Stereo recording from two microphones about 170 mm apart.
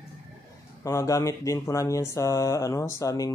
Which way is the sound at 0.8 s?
20° left (ahead or behind).